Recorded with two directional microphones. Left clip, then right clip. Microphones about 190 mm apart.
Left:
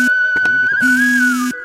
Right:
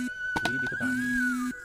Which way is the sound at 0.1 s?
40° left (ahead or behind).